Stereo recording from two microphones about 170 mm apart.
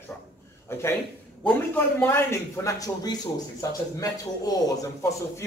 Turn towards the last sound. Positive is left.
turn(degrees=20)  # may be behind; listen again after turning